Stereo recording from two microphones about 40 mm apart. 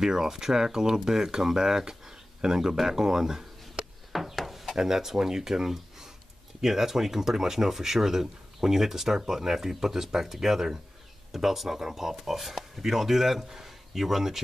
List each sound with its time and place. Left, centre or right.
0.0 s speech: centre
4.1 s a sound: centre
4.7 s speech: centre